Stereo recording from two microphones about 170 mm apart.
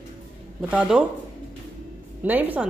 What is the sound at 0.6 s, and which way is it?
Speech, 10° right (ahead or behind).